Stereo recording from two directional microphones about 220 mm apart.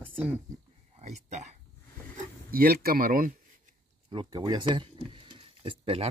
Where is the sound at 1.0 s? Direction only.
30° right (ahead or behind).